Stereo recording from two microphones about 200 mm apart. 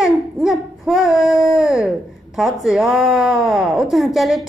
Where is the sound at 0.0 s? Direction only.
5° right (ahead or behind).